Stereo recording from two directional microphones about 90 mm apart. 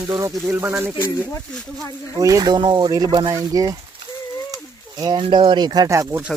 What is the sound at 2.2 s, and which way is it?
Speech, 40° right (ahead or behind).